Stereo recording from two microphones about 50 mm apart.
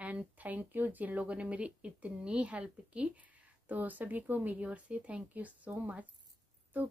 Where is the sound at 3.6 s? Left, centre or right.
Right.